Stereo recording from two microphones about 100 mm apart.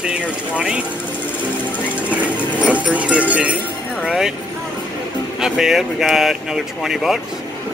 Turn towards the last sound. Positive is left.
turn(degrees=-5)  # may be behind; listen again after turning